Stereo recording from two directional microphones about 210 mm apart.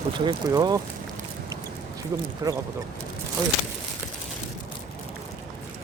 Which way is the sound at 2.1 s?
15° right (ahead or behind).